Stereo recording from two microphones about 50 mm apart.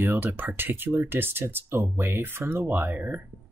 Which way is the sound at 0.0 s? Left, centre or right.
Right.